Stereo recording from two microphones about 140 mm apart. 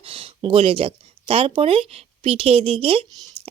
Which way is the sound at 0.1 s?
40° right (ahead or behind).